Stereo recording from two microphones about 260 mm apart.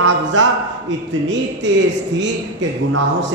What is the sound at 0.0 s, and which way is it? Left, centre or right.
Speech, right.